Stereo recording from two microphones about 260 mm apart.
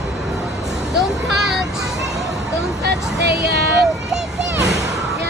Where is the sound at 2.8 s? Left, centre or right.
Right.